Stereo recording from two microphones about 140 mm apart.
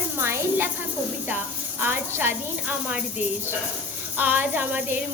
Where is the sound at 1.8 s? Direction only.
15° right (ahead or behind).